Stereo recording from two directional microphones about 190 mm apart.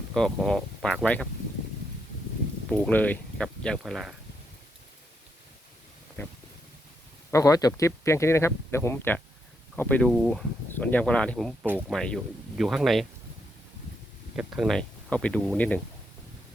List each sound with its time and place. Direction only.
0.1 s speech: centre (ahead or behind)
2.6 s speech: 5° left (ahead or behind)
6.2 s speech: 10° left (ahead or behind)
11.6 s speech: 10° right (ahead or behind)
11.9 s speech: centre (ahead or behind)
14.3 s speech: centre (ahead or behind)